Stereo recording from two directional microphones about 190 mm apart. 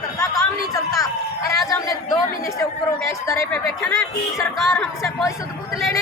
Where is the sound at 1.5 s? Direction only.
20° left (ahead or behind).